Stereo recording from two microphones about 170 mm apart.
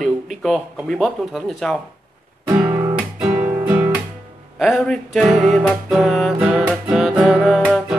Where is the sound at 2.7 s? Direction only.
20° right (ahead or behind).